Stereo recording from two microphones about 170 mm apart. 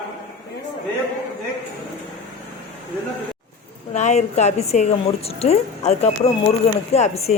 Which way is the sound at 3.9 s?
40° left (ahead or behind).